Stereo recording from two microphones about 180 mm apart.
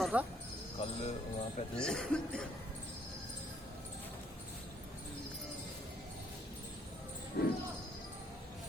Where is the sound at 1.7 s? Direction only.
5° left (ahead or behind).